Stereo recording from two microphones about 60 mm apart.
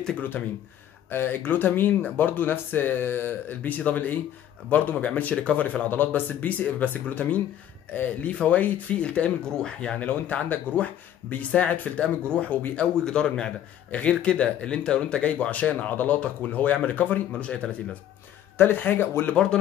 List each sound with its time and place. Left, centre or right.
1.1 s speech: left; by 9.9 s centre
9.9 s speech: left
18.6 s speech: left